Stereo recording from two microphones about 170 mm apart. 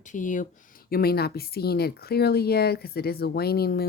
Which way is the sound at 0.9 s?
65° left (ahead or behind).